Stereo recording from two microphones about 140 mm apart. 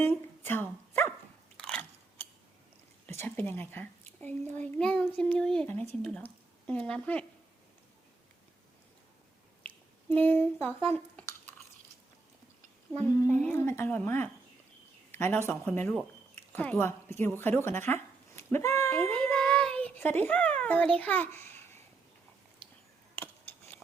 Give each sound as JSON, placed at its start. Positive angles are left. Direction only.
{"t": 0.0, "sound": "dog", "side_deg": 15}
{"t": 1.5, "sound": "biting", "side_deg": 5}
{"t": 3.1, "sound": "a child's voice", "side_deg": 15}
{"t": 5.6, "sound": "a child's voice", "side_deg": 15}
{"t": 9.6, "sound": "a sound", "side_deg": 10}
{"t": 10.8, "sound": "speech", "side_deg": 10}
{"t": 13.0, "sound": "a child's voice", "side_deg": 15}
{"t": 20.6, "sound": "a sound", "side_deg": 10}
{"t": 21.0, "sound": "a child's voice", "side_deg": 10}